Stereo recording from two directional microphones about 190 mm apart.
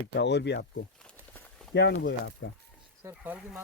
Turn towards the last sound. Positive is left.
turn(degrees=-10)  # may be behind; listen again after turning